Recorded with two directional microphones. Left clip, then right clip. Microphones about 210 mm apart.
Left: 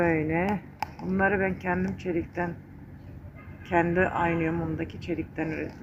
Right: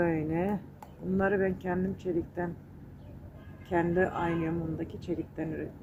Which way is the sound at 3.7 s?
25° left (ahead or behind).